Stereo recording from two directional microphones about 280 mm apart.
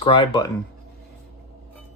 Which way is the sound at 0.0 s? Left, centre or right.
Centre.